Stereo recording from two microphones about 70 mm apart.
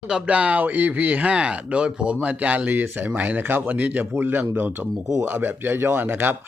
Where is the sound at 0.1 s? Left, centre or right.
Centre.